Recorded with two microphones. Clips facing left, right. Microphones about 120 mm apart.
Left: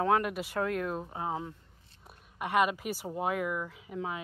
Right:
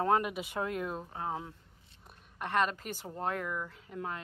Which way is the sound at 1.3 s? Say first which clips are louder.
Left 3 dB; centre (ahead or behind).